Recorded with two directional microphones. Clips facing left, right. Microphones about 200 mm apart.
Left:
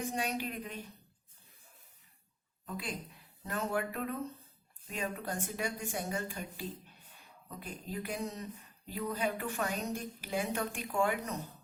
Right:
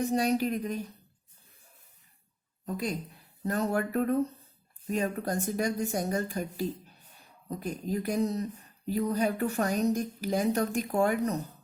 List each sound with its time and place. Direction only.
0.0 s a woman's voice: 35° right (ahead or behind)
2.6 s a woman's voice: 40° right (ahead or behind)